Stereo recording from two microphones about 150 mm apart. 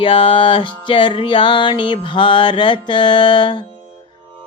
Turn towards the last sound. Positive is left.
turn(degrees=30)  # may be behind; listen again after turning